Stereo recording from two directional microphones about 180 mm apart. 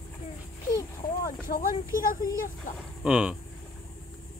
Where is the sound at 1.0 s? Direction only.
50° left (ahead or behind).